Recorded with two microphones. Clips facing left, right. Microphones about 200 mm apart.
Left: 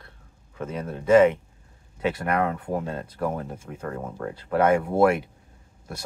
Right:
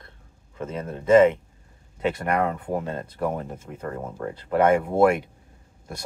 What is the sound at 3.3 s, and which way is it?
Speech, 10° left (ahead or behind).